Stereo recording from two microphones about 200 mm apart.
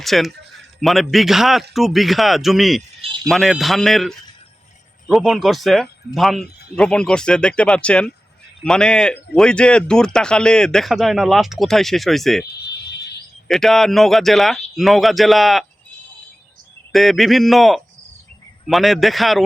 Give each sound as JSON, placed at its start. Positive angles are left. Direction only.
{"t": 0.0, "sound": "speech", "side_deg": 0}
{"t": 12.6, "sound": "a sound", "side_deg": 55}
{"t": 13.5, "sound": "speech", "side_deg": 0}
{"t": 16.9, "sound": "speech", "side_deg": 0}